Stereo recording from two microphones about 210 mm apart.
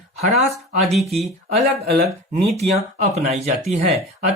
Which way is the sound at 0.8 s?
Centre (ahead or behind).